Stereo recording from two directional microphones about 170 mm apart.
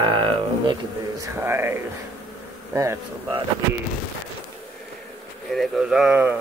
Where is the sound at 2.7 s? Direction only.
20° right (ahead or behind).